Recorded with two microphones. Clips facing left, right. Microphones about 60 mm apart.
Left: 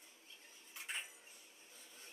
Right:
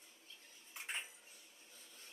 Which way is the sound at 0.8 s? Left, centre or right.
Right.